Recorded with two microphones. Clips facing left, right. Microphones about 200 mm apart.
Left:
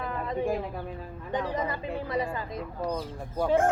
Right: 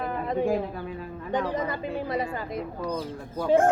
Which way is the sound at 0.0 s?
65° right (ahead or behind).